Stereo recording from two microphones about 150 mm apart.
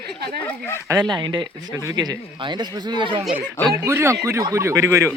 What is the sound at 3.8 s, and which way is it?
Speech, 15° right (ahead or behind).